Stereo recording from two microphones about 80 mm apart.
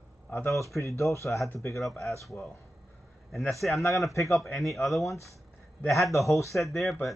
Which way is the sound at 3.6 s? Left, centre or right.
Centre.